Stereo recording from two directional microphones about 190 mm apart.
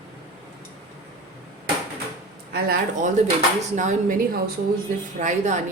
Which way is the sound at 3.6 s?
40° right (ahead or behind).